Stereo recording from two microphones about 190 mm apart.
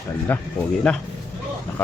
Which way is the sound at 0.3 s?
10° left (ahead or behind).